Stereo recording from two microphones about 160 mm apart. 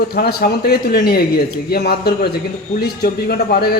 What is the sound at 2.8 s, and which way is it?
Speech, 75° left (ahead or behind).